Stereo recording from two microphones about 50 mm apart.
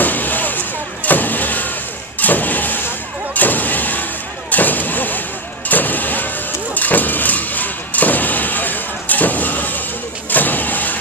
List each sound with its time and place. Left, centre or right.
0.0 s vehicle: left
4.5 s artillery fire: left
5.7 s vehicle: left
6.7 s a sound: left
10.3 s vehicle: left